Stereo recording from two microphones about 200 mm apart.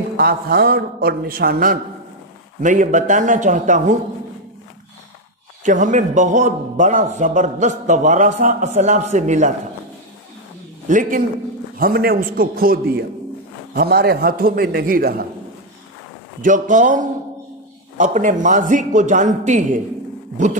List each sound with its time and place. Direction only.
0.2 s a man's voice: 50° right (ahead or behind)
5.6 s a man's voice: 40° right (ahead or behind)
10.9 s a man's voice: 40° right (ahead or behind)
16.3 s a man's voice: 40° right (ahead or behind)